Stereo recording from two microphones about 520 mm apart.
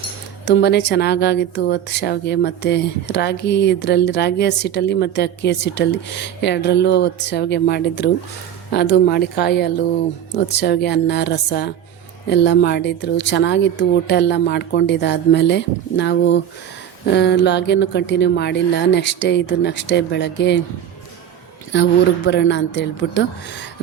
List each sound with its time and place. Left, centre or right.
0.4 s speech: centre
21.7 s speech: centre